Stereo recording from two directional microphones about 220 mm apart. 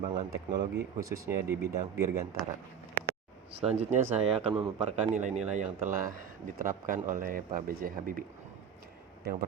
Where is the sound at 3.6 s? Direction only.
30° right (ahead or behind).